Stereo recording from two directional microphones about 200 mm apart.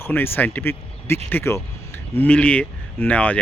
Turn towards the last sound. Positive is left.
turn(degrees=5)  # may be behind; listen again after turning